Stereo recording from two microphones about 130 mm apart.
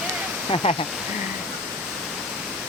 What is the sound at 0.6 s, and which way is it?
Speech, 45° left (ahead or behind).